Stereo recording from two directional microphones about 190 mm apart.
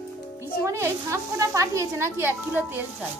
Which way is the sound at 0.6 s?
15° right (ahead or behind).